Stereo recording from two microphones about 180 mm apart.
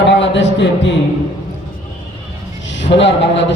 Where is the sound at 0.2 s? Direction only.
80° left.